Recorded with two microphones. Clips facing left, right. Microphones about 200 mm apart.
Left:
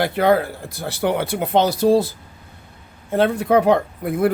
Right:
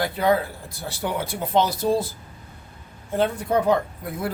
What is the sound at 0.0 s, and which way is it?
Speech, 70° left (ahead or behind).